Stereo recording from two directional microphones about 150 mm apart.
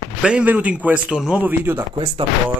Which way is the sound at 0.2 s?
10° right (ahead or behind).